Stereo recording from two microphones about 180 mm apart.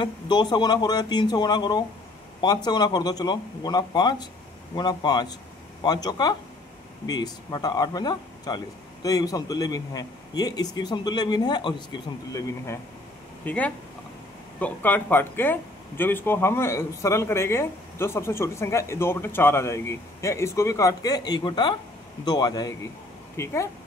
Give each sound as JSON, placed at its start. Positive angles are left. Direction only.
{"t": 0.0, "sound": "speech", "side_deg": 25}